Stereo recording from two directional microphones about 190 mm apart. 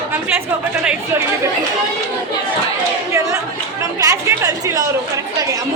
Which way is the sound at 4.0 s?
15° right (ahead or behind).